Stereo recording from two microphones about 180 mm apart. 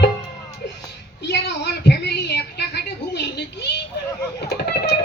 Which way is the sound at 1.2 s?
70° left (ahead or behind).